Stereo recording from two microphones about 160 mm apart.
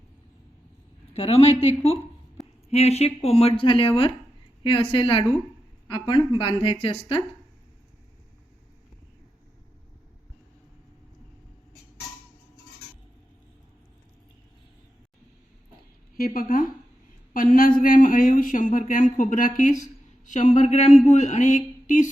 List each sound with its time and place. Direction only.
1.1 s speech: 40° left (ahead or behind)
16.1 s speech: 65° left (ahead or behind)
19.1 s a sound: 55° left (ahead or behind)